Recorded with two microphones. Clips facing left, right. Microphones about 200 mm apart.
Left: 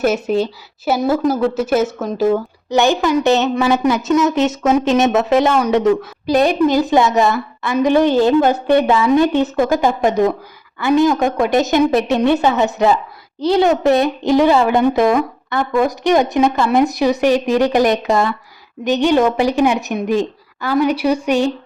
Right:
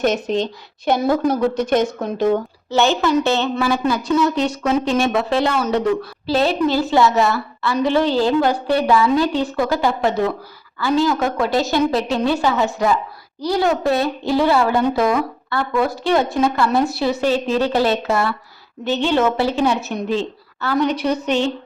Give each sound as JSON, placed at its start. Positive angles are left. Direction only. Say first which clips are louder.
{"t": 0.0, "sound": "a woman's voice", "louder": "left 3 dB", "side_deg": 5}
{"t": 2.6, "sound": "a woman's voice", "louder": "left 2 dB", "side_deg": 15}